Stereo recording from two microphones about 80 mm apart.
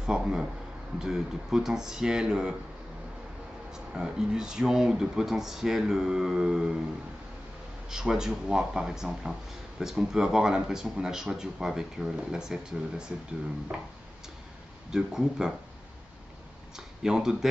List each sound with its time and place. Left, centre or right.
0.0 s speech: centre
3.7 s speech: centre
7.9 s speech: centre
14.9 s speech: centre
16.7 s speech: centre